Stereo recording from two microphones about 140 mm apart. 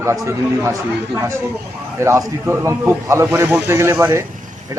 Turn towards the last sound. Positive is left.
turn(degrees=-15)  # may be behind; listen again after turning